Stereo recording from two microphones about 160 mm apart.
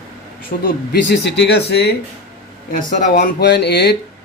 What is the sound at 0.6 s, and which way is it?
Speech, 90° left.